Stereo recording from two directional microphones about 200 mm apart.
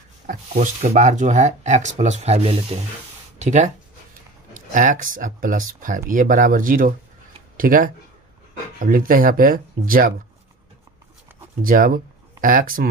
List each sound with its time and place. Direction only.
0.3 s speech: 35° right (ahead or behind)
11.6 s speech: 45° right (ahead or behind)